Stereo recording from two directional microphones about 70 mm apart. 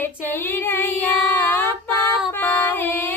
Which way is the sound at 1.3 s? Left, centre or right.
Left.